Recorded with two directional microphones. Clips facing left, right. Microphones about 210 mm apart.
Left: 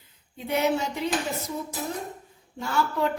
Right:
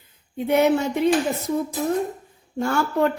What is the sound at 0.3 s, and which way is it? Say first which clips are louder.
Speech: right 7 dB; 55° right (ahead or behind).